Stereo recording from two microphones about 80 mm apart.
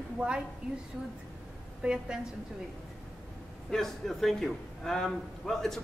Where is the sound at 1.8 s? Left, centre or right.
Centre.